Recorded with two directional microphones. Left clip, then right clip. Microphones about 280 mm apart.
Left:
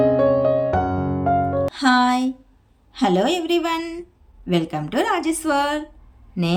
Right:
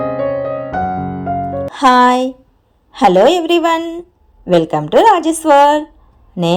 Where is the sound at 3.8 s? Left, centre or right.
Left.